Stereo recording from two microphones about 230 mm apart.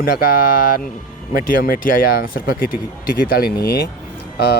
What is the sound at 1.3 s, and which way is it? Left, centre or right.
Speech, left.